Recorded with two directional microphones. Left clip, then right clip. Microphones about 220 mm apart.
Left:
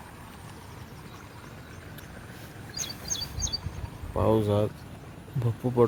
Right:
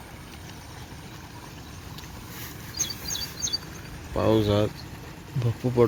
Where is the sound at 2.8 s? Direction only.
15° left (ahead or behind).